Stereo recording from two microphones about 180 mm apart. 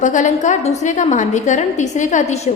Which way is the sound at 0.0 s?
45° left (ahead or behind).